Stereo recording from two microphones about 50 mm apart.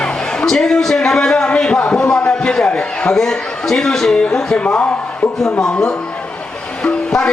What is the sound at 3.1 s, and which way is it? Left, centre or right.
A man's voice, centre.